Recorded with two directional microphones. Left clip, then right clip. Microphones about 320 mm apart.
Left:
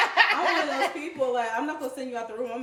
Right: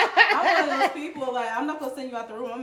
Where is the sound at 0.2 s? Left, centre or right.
Right.